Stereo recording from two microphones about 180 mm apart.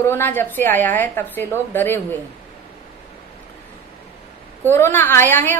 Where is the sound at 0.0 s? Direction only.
10° left (ahead or behind).